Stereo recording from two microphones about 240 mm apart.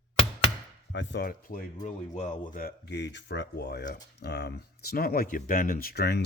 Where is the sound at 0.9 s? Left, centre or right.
Left.